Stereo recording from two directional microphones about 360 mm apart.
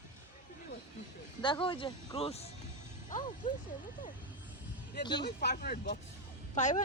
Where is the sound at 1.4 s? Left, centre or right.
Centre.